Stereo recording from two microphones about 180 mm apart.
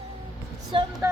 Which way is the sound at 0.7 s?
30° right (ahead or behind).